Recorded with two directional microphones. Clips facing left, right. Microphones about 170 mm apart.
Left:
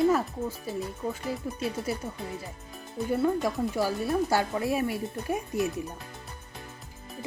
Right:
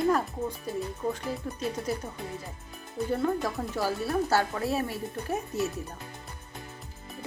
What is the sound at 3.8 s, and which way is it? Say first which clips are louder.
Speech: even; 15° left (ahead or behind).